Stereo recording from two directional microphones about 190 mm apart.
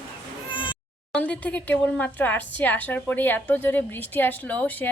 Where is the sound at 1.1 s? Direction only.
5° left (ahead or behind).